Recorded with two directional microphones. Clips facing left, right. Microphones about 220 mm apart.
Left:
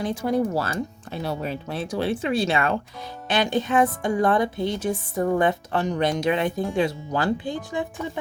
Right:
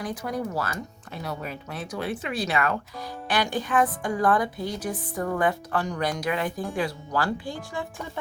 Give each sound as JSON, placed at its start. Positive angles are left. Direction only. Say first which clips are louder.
{"t": 0.0, "sound": "a woman's voice", "louder": "left 7 dB", "side_deg": 25}